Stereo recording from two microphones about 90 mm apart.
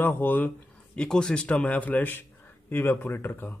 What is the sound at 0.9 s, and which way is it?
A man's voice, 10° left (ahead or behind).